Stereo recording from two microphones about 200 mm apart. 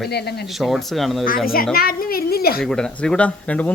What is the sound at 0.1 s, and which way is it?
Speech, 55° left (ahead or behind).